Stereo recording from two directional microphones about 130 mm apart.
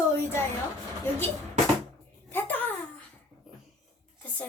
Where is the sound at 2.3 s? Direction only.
15° left (ahead or behind).